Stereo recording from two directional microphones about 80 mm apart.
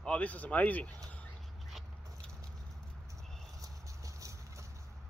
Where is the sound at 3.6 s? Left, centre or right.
Right.